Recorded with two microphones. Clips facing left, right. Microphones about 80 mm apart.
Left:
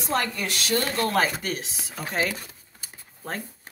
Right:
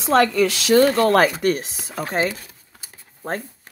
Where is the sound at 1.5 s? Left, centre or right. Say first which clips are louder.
Right 8 dB; right.